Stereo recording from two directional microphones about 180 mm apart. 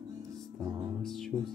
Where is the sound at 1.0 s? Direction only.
Centre (ahead or behind).